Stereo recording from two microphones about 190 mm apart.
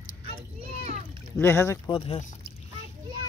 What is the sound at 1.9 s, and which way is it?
Speech, 30° left (ahead or behind).